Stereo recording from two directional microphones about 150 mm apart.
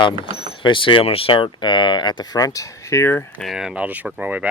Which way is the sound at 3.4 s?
5° right (ahead or behind).